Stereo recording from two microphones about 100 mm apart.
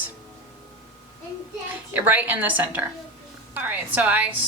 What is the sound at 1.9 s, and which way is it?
Speech, 15° right (ahead or behind).